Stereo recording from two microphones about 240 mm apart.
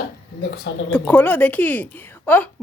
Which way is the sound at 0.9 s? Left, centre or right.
Centre.